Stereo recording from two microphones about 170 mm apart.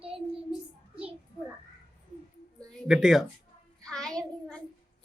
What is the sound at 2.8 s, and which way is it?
Speech, 5° right (ahead or behind).